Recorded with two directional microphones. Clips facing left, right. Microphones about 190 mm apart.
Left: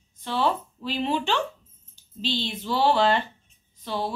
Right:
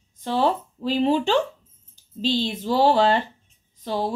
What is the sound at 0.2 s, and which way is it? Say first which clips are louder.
A woman's voice: right 3 dB; 40° right (ahead or behind).